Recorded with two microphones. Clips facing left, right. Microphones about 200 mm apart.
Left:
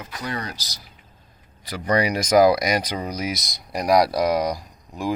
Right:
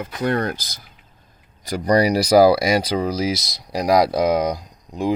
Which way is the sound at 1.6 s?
40° right (ahead or behind).